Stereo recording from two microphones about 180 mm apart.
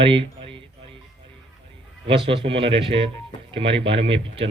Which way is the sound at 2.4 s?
30° right (ahead or behind).